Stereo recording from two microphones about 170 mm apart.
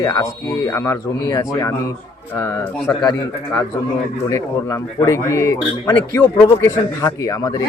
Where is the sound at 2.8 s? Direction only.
Centre (ahead or behind).